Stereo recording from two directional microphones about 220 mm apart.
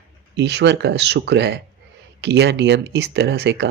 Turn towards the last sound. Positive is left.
turn(degrees=-50)  # may be behind; listen again after turning